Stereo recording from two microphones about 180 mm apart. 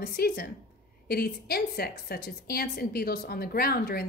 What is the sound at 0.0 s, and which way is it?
A woman's voice, 60° left (ahead or behind).